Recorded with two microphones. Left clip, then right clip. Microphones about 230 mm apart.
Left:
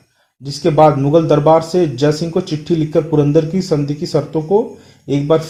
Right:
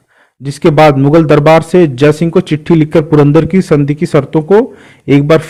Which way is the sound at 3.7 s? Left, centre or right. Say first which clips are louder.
Right 6 dB; right.